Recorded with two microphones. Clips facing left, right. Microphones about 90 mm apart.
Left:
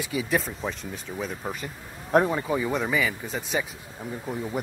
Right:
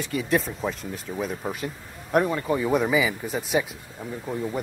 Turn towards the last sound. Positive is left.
turn(degrees=0)  # may be behind; listen again after turning